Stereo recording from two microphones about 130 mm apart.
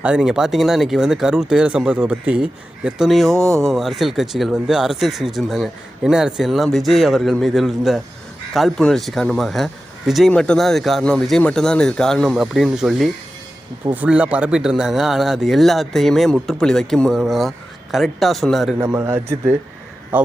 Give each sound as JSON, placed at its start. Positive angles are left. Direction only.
{"t": 0.0, "sound": "speech", "side_deg": -5}
{"t": 18.8, "sound": "a man's voice", "side_deg": -20}